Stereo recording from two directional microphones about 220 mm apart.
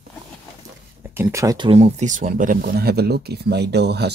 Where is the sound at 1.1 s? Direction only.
10° right (ahead or behind).